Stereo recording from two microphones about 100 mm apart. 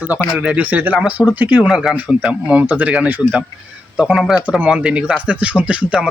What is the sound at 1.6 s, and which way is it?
Speech, centre (ahead or behind).